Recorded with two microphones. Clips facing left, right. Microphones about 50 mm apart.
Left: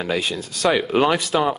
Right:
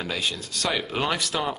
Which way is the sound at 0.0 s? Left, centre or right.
Centre.